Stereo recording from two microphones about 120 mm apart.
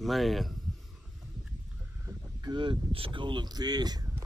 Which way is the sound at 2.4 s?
35° right (ahead or behind).